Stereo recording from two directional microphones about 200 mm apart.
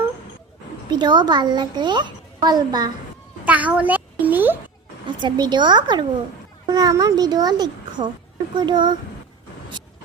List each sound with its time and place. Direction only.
0.9 s speech: 20° right (ahead or behind)
3.4 s a sound: 5° right (ahead or behind)
5.0 s speech: 20° right (ahead or behind)